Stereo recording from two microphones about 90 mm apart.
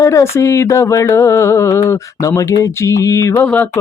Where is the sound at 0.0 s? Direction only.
35° left (ahead or behind).